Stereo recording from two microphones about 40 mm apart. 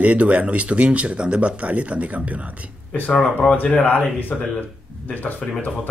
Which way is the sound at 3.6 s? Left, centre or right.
Left.